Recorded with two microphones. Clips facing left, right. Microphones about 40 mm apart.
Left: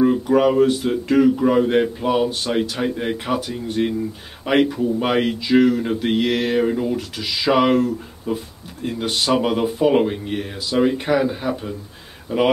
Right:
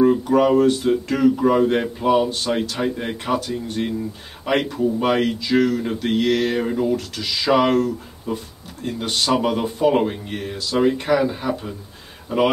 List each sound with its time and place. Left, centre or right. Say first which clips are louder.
0.0 s speech: even; centre